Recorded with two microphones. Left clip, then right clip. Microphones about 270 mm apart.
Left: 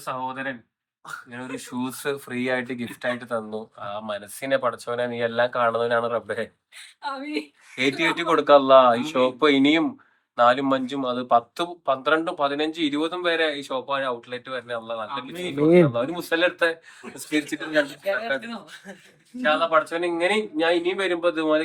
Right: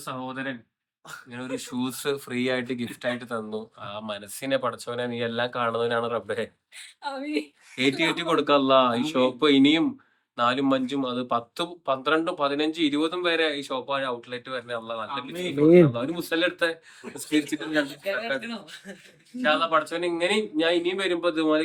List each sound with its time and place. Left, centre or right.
0.0 s speech: centre
6.7 s a woman's voice: left
7.8 s speech: centre
18.4 s speech: centre
19.4 s speech: centre